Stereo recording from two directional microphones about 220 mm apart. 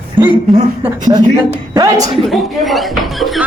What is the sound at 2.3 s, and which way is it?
Speech, centre (ahead or behind).